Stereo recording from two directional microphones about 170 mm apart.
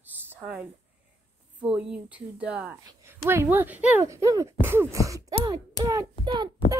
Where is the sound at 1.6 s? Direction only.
5° right (ahead or behind).